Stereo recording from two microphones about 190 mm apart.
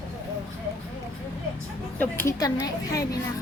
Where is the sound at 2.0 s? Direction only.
10° left (ahead or behind).